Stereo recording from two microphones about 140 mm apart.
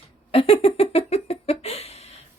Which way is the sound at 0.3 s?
40° left (ahead or behind).